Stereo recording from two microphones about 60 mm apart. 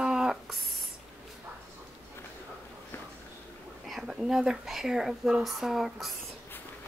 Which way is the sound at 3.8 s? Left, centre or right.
Centre.